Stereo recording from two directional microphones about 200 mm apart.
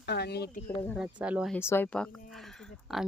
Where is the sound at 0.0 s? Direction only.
55° left (ahead or behind).